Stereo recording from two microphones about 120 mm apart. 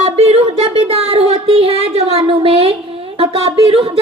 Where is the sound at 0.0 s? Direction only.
60° right (ahead or behind).